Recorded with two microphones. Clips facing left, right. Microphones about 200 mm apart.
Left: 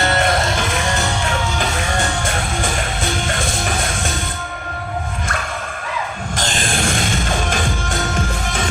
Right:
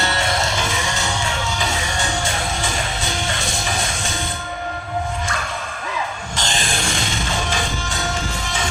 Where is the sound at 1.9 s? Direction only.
55° left (ahead or behind).